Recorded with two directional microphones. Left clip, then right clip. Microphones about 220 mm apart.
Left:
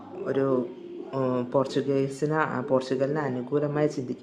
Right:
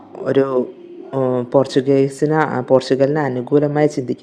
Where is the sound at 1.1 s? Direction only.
20° right (ahead or behind).